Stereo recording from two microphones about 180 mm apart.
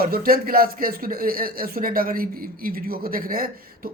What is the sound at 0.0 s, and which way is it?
Speech, 55° right (ahead or behind).